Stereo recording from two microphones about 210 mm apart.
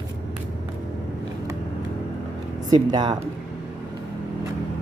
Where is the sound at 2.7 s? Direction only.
20° right (ahead or behind).